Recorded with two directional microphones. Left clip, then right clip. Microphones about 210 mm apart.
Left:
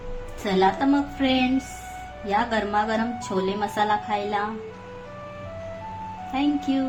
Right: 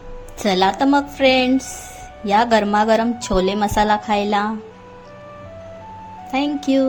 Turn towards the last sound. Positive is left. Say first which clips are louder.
# right 6 dB
turn(degrees=-40)  # may be behind; listen again after turning